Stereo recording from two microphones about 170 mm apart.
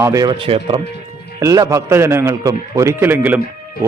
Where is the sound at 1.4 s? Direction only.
20° right (ahead or behind).